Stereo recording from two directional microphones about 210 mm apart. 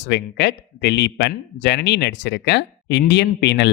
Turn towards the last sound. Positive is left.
turn(degrees=55)  # may be behind; listen again after turning